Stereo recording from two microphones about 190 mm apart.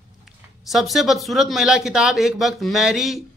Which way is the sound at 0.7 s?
Centre (ahead or behind).